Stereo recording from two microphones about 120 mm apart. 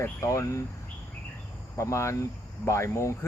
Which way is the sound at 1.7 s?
25° left (ahead or behind).